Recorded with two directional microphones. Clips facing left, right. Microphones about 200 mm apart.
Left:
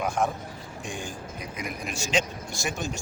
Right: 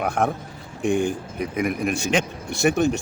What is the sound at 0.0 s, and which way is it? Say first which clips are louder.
Speech: right 4 dB; 60° right (ahead or behind).